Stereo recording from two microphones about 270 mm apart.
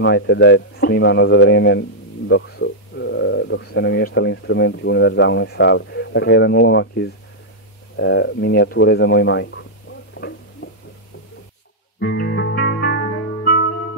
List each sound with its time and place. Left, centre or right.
0.0 s a man's voice: left
10.1 s a sound: left
12.0 s music: left